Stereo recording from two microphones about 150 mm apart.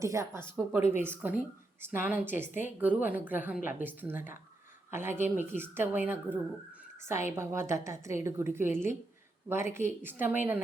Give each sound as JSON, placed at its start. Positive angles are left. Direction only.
{"t": 0.0, "sound": "a woman's voice", "side_deg": -20}